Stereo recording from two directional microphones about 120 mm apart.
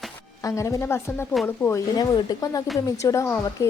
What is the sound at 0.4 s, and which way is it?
Speech, 25° left (ahead or behind).